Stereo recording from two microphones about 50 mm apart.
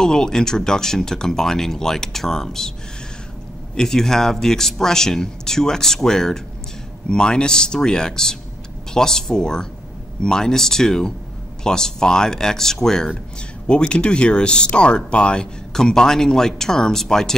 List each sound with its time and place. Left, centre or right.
0.0 s speech: centre
3.7 s speech: centre